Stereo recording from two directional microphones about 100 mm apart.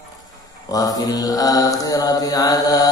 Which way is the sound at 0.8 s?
40° left (ahead or behind).